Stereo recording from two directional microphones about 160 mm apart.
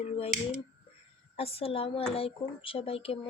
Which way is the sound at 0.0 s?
40° left (ahead or behind).